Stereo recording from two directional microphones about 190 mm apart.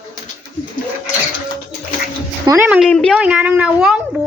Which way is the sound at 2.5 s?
10° right (ahead or behind).